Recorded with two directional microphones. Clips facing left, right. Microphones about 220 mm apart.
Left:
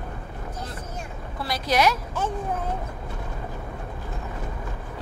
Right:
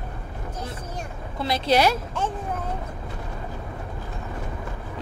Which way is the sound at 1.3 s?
25° right (ahead or behind).